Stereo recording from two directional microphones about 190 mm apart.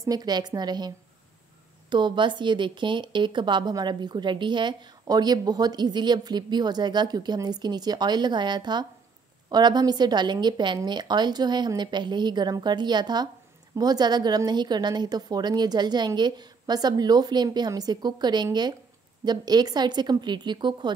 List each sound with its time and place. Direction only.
0.0 s speech: 20° right (ahead or behind)